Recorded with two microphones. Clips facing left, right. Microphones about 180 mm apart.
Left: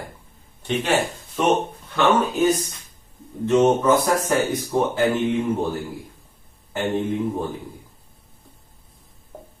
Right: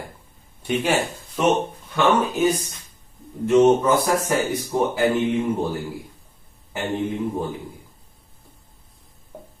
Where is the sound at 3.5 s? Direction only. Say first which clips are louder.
Right 1 dB; 10° right (ahead or behind).